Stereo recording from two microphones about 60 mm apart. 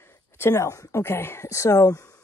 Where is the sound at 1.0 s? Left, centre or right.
Left.